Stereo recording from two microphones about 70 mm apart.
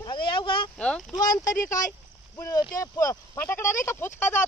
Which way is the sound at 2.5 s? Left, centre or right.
Left.